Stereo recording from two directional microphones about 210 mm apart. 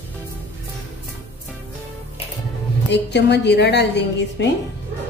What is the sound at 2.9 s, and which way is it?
A woman's voice, 55° left (ahead or behind).